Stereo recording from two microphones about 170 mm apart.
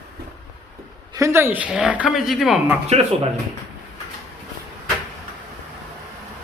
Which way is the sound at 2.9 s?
40° right (ahead or behind).